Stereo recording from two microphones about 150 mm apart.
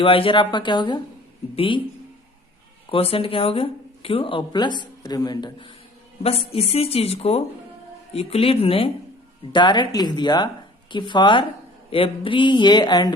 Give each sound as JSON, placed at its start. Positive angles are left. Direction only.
{"t": 0.0, "sound": "speech", "side_deg": 35}
{"t": 2.9, "sound": "speech", "side_deg": 40}